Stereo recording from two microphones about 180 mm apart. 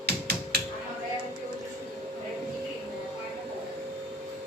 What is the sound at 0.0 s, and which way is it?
Computer keyboard, 65° right (ahead or behind).